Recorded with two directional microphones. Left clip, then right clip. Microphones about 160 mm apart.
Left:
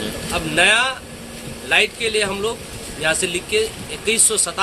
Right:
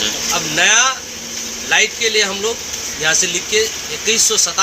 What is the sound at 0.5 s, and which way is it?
Speech, 25° left (ahead or behind).